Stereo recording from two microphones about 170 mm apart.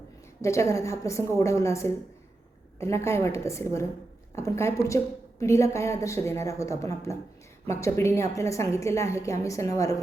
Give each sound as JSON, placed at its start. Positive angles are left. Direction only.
{"t": 0.4, "sound": "a woman's voice", "side_deg": 15}